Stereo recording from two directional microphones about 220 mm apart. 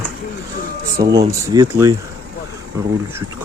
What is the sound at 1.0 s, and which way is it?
Speech, 15° right (ahead or behind).